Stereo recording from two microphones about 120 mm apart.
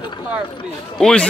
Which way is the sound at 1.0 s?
5° left (ahead or behind).